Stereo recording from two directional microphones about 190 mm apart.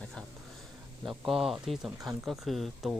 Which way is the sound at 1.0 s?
Centre (ahead or behind).